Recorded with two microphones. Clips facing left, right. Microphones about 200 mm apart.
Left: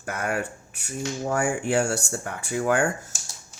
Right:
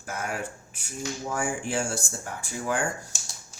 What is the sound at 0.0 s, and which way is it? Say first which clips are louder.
Speech: left 4 dB; 60° left (ahead or behind).